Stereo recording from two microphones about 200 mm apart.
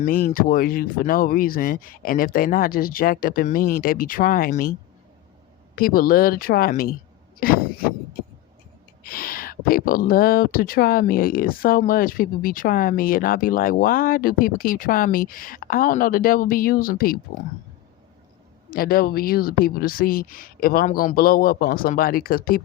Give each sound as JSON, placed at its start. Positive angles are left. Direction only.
{"t": 0.0, "sound": "speech", "side_deg": 45}
{"t": 5.7, "sound": "speech", "side_deg": 45}
{"t": 7.3, "sound": "a sound", "side_deg": 45}
{"t": 9.0, "sound": "speech", "side_deg": 45}
{"t": 18.7, "sound": "speech", "side_deg": 50}